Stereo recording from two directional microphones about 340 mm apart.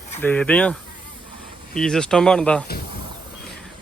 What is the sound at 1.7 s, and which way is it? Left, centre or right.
Speech, centre.